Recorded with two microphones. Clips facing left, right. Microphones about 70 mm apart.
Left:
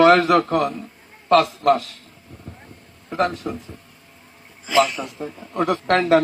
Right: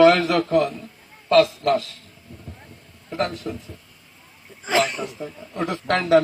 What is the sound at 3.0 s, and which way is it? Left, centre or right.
Speech, left.